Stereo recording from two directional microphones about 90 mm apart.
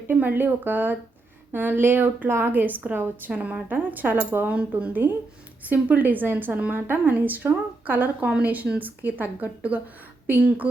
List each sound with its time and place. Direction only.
0.1 s a woman's voice: 20° right (ahead or behind)